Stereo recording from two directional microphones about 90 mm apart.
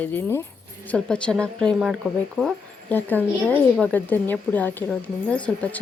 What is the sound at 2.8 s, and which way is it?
A woman's voice, 20° left (ahead or behind).